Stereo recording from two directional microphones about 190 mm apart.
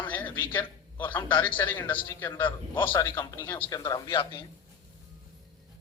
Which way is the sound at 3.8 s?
20° left (ahead or behind).